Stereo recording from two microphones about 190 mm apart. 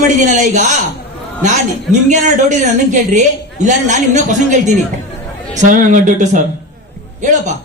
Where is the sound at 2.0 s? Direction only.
40° right (ahead or behind).